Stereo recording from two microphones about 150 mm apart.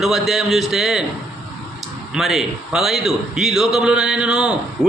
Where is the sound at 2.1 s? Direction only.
Centre (ahead or behind).